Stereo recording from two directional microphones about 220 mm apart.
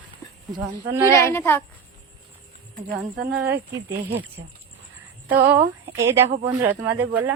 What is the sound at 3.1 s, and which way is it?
Speech, 45° right (ahead or behind).